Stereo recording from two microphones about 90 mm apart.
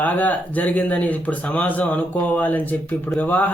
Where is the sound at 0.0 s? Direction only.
20° left (ahead or behind).